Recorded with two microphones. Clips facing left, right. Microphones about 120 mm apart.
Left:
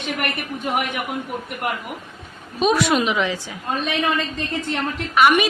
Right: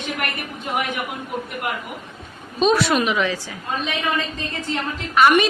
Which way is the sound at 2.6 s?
15° left (ahead or behind).